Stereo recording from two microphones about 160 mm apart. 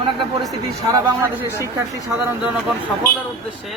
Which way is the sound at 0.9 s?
15° right (ahead or behind).